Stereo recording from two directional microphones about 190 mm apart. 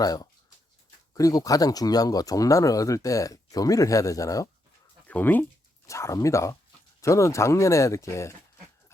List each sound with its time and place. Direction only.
0.0 s speech: 20° left (ahead or behind)